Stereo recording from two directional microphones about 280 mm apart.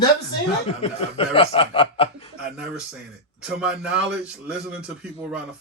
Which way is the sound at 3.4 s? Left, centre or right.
Centre.